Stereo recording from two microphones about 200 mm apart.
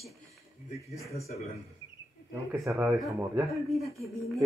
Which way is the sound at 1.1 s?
30° left (ahead or behind).